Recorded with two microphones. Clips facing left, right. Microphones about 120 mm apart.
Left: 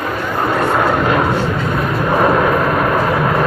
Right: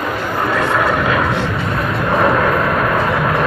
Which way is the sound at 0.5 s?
25° left (ahead or behind).